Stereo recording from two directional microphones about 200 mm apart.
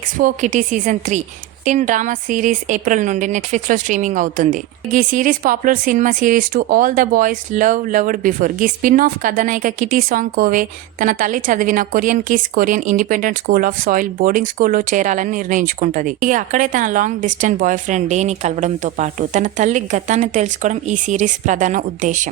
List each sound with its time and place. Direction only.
0.2 s speech: 40° right (ahead or behind)